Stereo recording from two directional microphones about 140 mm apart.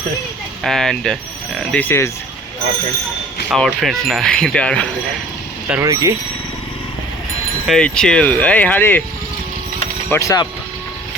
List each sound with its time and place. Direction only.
0.6 s speech: 5° left (ahead or behind)
3.5 s speech: centre (ahead or behind)
5.8 s speech: 25° right (ahead or behind)
7.7 s speech: 5° left (ahead or behind)
10.1 s speech: 20° left (ahead or behind)